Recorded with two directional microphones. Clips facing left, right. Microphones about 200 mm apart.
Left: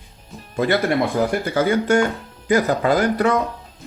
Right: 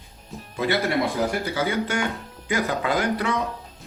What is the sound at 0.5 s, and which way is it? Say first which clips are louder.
Music: left 5 dB; 50° left (ahead or behind).